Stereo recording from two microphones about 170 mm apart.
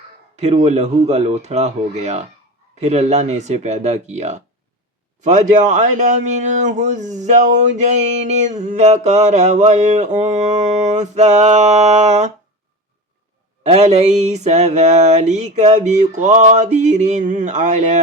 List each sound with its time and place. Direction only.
0.3 s speech: 40° right (ahead or behind)
13.7 s speech: 40° right (ahead or behind)